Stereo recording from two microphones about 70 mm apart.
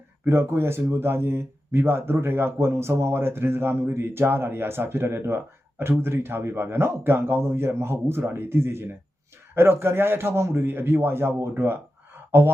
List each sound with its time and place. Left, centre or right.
0.3 s speech: right